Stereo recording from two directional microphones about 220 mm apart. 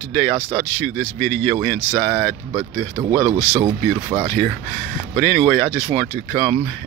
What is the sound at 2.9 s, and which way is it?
Speech, 15° right (ahead or behind).